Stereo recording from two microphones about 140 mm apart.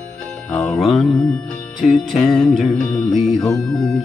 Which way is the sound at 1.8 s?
Centre (ahead or behind).